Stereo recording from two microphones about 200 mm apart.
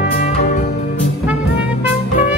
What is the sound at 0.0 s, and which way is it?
Music, 45° left (ahead or behind).